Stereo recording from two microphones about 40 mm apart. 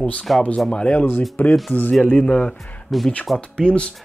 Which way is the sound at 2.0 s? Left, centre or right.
Left.